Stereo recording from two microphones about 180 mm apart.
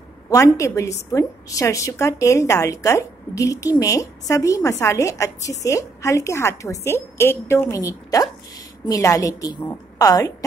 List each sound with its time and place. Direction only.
0.6 s a woman's voice: 15° left (ahead or behind)